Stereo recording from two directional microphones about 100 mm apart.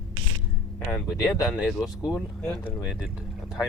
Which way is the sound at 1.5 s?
5° right (ahead or behind).